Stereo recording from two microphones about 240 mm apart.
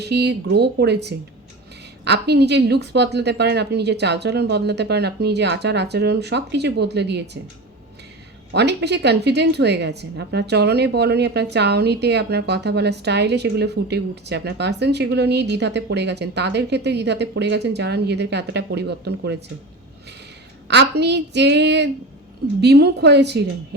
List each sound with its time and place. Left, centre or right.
0.0 s a woman's voice: right
2.0 s a woman's voice: right
8.5 s a woman's voice: right
20.7 s a woman's voice: right